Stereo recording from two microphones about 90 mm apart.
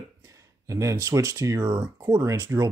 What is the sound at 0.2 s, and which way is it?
Speech, 35° right (ahead or behind).